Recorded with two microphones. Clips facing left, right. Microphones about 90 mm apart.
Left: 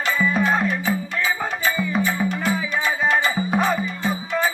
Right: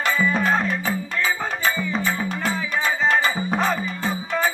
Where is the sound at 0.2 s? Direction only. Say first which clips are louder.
Left 3 dB; centre (ahead or behind).